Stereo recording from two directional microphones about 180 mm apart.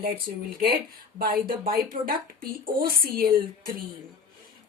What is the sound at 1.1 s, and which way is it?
A woman's voice, 50° right (ahead or behind).